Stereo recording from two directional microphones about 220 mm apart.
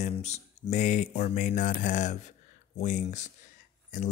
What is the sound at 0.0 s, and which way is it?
Speech, 30° left (ahead or behind).